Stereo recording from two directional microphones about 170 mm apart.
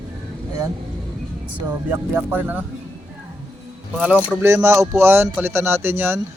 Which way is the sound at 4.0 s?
10° right (ahead or behind).